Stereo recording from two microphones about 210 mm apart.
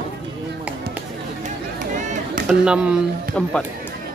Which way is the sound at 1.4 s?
35° right (ahead or behind).